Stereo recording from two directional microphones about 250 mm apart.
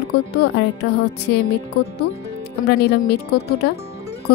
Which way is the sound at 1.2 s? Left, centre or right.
Left.